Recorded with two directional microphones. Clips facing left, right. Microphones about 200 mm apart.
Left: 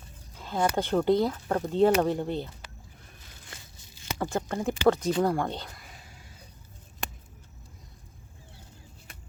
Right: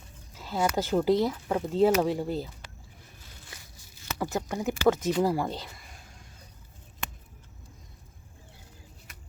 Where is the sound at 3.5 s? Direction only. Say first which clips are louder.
Left 1 dB; 25° left (ahead or behind).